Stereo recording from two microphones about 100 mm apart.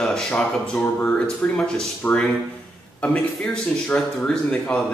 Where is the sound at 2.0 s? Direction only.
20° left (ahead or behind).